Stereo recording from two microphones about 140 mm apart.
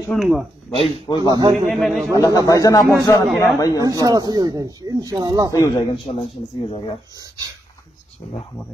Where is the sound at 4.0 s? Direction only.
30° right (ahead or behind).